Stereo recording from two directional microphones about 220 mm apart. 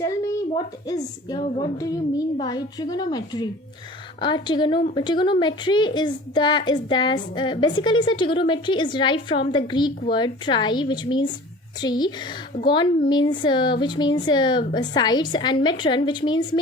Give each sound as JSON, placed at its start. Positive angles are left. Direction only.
{"t": 0.0, "sound": "a woman's voice", "side_deg": 15}